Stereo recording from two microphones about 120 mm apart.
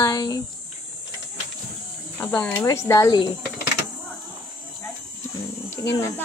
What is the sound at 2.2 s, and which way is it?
Speech, 15° left (ahead or behind).